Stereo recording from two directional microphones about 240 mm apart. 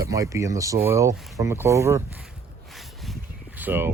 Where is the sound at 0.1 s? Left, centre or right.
Centre.